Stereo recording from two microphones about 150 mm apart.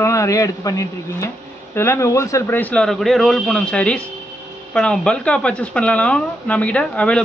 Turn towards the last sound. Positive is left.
turn(degrees=5)  # may be behind; listen again after turning